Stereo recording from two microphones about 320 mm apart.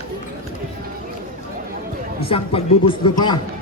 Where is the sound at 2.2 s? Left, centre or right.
Centre.